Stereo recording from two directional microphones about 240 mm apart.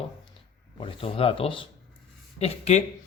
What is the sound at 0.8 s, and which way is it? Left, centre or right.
Speech, left.